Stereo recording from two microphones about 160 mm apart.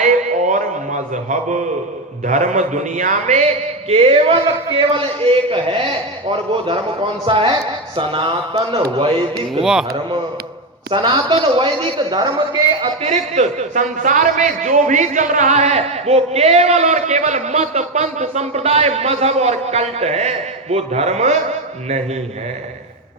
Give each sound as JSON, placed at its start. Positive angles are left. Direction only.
{"t": 0.0, "sound": "a sound", "side_deg": -50}
{"t": 2.2, "sound": "a man's voice", "side_deg": -55}
{"t": 7.3, "sound": "speech", "side_deg": -30}
{"t": 10.8, "sound": "a man's voice", "side_deg": -30}
{"t": 12.8, "sound": "a man's voice", "side_deg": -40}